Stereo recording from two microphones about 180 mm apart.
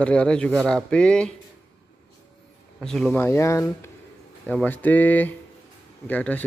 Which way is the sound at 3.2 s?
15° left (ahead or behind).